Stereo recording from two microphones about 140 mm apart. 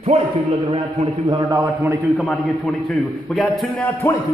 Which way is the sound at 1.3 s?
25° right (ahead or behind).